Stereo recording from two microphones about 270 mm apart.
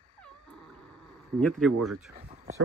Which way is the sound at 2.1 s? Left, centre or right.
Right.